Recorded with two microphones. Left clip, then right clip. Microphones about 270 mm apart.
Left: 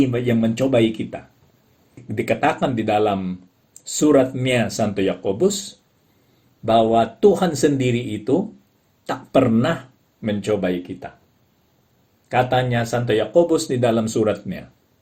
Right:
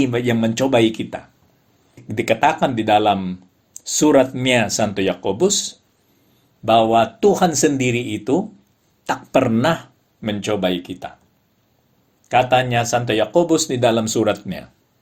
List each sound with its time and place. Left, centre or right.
0.0 s speech: centre
6.9 s speech: centre
12.3 s speech: centre